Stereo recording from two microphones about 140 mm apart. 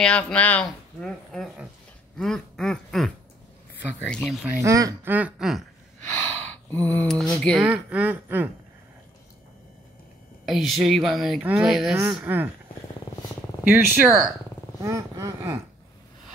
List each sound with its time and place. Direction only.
0.0 s speech: 10° left (ahead or behind)
2.1 s quack: 5° left (ahead or behind)
4.1 s speech: centre (ahead or behind)
4.6 s a sound: 25° right (ahead or behind)
5.1 s speech: 5° right (ahead or behind)
6.1 s a sound: 10° left (ahead or behind)
7.3 s speech: 5° left (ahead or behind)
7.6 s speech: 10° right (ahead or behind)
10.4 s speech: centre (ahead or behind)
12.3 s speech: 15° right (ahead or behind)
13.7 s speech: 5° right (ahead or behind)
14.8 s a sound: 20° right (ahead or behind)